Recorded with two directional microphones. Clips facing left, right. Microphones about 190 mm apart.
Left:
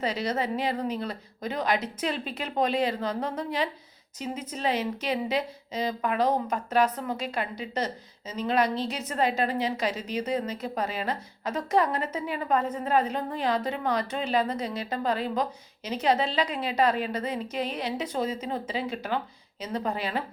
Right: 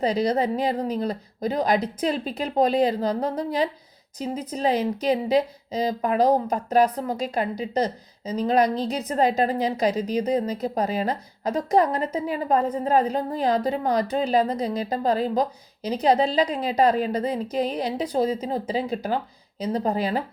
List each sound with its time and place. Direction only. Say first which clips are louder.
0.0 s speech: right 6 dB; 35° right (ahead or behind)